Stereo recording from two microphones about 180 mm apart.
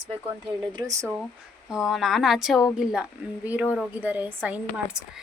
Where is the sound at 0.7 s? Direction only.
20° right (ahead or behind).